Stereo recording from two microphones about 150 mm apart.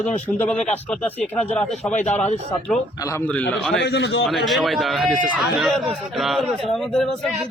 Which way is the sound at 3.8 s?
90° left.